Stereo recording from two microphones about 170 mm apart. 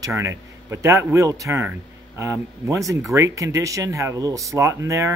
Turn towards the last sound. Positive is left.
turn(degrees=-20)  # may be behind; listen again after turning